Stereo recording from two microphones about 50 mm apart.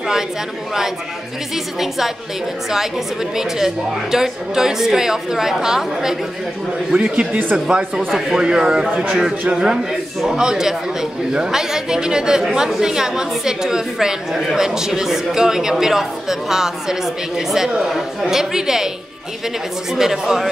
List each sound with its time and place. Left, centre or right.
1.5 s a woman's voice: centre
6.9 s a man's voice: centre
19.9 s speech: centre